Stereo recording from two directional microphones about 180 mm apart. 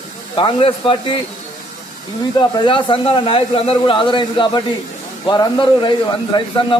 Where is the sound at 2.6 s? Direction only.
30° left (ahead or behind).